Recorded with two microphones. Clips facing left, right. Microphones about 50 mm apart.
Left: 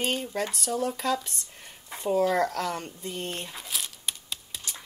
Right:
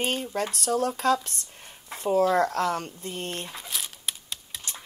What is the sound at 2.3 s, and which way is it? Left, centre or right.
Speech, right.